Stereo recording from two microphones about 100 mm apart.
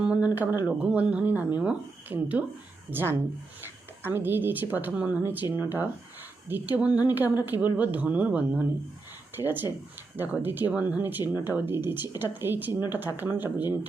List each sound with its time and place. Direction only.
0.0 s a woman's voice: 15° right (ahead or behind)